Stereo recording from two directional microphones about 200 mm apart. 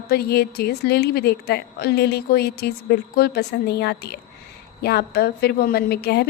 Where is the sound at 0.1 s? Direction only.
50° left (ahead or behind).